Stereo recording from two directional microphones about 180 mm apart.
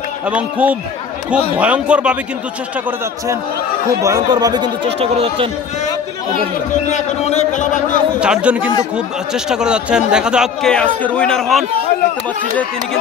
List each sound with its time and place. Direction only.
0.3 s a man's voice: 5° right (ahead or behind)
4.0 s speech: 20° right (ahead or behind)
6.9 s a man's voice: 40° left (ahead or behind)
8.2 s speech: 5° right (ahead or behind)